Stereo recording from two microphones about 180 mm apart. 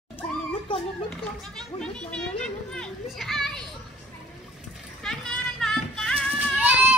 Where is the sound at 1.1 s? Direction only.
5° left (ahead or behind).